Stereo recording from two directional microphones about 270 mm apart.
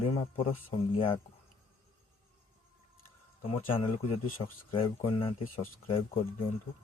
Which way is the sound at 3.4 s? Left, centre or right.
Left.